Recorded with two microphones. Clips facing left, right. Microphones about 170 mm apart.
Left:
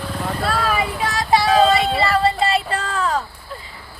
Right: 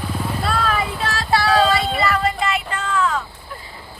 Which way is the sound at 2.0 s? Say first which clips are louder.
Left 2 dB; 30° left (ahead or behind).